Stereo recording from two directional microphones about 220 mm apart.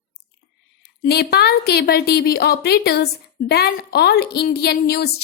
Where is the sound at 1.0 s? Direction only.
45° left (ahead or behind).